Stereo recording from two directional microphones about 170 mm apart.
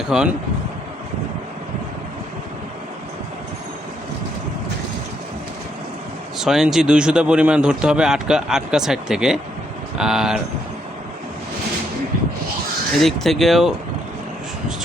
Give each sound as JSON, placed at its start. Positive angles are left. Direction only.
{"t": 0.1, "sound": "speech", "side_deg": 0}
{"t": 6.4, "sound": "speech", "side_deg": 0}
{"t": 13.0, "sound": "speech", "side_deg": 0}